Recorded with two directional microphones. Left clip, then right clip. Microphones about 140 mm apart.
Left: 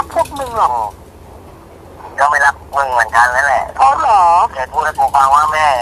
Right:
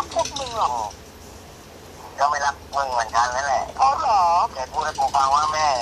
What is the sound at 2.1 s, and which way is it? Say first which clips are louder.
Speech: left 10 dB; 45° left (ahead or behind).